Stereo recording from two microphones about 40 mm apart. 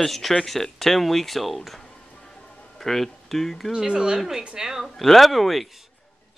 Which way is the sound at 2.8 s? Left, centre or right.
Centre.